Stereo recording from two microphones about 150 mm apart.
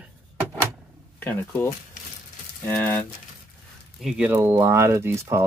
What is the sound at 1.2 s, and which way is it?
Speech, 15° left (ahead or behind).